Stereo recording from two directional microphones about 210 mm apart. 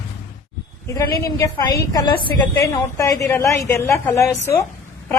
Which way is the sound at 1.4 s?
15° left (ahead or behind).